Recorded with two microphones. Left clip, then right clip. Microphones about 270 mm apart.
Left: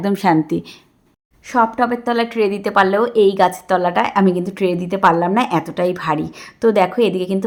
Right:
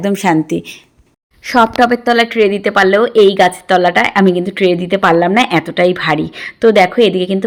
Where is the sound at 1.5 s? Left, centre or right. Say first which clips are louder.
Right 6 dB; centre.